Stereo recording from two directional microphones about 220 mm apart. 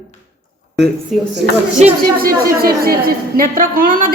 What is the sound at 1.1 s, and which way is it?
Speech, centre (ahead or behind).